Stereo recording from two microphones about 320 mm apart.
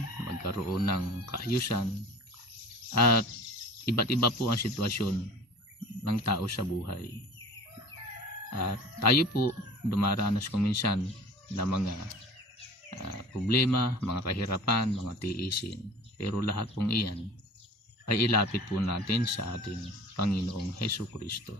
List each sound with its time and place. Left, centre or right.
0.3 s speech: left
2.9 s speech: left
8.5 s speech: left
13.5 s speech: left